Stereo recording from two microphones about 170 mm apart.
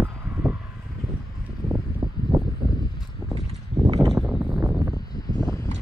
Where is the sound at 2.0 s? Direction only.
25° right (ahead or behind).